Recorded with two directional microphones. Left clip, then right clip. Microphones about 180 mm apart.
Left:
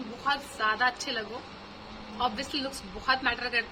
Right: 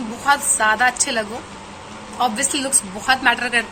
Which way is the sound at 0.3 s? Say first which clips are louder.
Right 12 dB; 20° left (ahead or behind).